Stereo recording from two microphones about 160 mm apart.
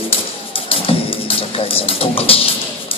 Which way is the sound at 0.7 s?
35° left (ahead or behind).